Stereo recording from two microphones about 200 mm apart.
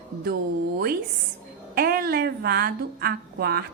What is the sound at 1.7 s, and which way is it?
A woman's voice, 50° right (ahead or behind).